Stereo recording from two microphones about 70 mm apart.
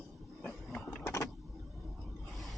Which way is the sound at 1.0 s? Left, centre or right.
Left.